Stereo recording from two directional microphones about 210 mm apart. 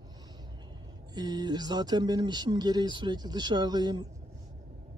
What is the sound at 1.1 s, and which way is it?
Speech, 20° right (ahead or behind).